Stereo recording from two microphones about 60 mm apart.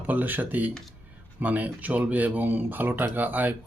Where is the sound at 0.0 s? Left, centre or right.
Right.